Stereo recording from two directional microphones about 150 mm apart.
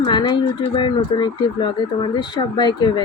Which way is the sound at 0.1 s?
30° left (ahead or behind).